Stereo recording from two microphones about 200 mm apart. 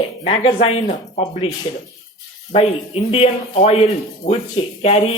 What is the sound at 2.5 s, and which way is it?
Speech, 30° left (ahead or behind).